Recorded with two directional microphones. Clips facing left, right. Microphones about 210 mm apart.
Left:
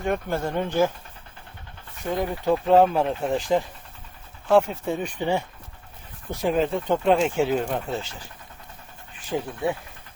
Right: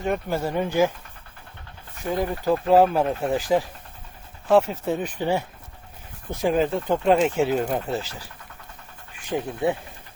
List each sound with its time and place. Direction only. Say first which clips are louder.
0.0 s speech: right 1 dB; 5° right (ahead or behind)
2.0 s speech: even; centre (ahead or behind)
6.4 s speech: right 1 dB; centre (ahead or behind)
9.6 s speech: right 3 dB; 20° right (ahead or behind)